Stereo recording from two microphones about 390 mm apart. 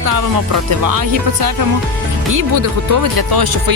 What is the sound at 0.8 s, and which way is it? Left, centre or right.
Speech, right.